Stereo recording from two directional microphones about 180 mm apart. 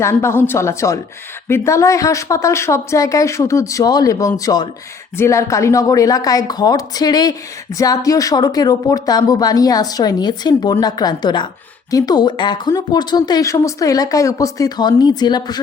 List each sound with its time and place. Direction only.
0.0 s speech: 15° left (ahead or behind)